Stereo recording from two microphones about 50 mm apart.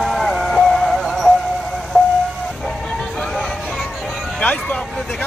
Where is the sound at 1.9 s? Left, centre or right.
Right.